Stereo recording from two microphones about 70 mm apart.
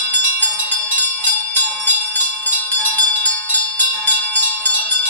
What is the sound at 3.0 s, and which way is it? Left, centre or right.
Music, left.